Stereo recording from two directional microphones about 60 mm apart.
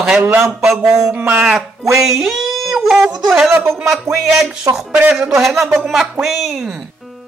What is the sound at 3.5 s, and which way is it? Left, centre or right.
Speech, right.